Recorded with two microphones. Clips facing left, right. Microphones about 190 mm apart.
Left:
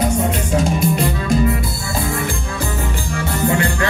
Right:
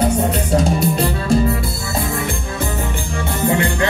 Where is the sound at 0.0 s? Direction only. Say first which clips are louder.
Right 1 dB; 35° right (ahead or behind).